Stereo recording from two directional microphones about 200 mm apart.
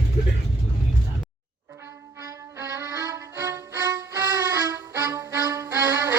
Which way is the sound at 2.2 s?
15° right (ahead or behind).